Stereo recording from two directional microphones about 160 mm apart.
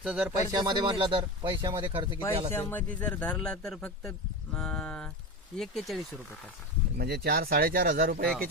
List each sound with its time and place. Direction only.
0.0 s speech: 5° right (ahead or behind)
0.5 s speech: 25° right (ahead or behind)
2.5 s speech: 15° left (ahead or behind)
6.9 s speech: 75° right (ahead or behind)